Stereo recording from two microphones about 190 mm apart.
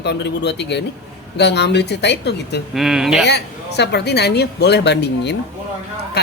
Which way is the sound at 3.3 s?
60° left (ahead or behind).